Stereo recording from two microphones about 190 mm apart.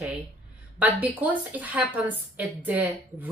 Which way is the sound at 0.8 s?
10° right (ahead or behind).